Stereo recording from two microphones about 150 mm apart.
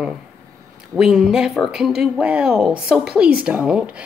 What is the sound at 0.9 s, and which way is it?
Speech, 5° right (ahead or behind).